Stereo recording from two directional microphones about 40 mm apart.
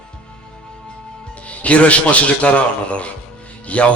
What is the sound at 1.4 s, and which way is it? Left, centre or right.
A man's voice, left.